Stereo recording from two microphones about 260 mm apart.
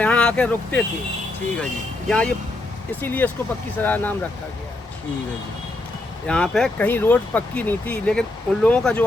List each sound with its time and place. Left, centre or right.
0.0 s speech: centre
2.0 s speech: centre
6.2 s speech: centre